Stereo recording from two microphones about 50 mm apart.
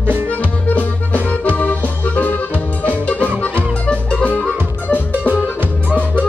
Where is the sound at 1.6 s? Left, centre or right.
Left.